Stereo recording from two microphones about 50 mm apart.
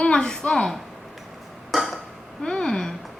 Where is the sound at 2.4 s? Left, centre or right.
Centre.